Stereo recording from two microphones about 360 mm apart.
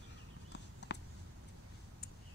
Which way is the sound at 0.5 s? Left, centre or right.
Left.